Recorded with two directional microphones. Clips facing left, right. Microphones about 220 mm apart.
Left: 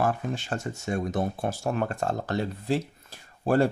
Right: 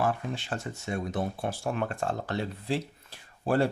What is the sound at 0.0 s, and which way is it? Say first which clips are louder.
Speech: left 2 dB; 45° left (ahead or behind).